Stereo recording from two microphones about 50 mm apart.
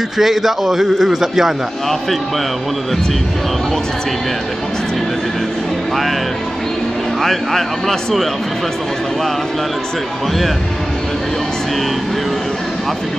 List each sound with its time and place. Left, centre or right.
0.2 s a man's voice: centre
7.2 s a man's voice: centre